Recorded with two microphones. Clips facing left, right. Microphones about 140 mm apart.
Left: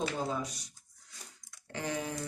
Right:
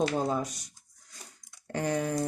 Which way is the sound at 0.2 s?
50° right (ahead or behind).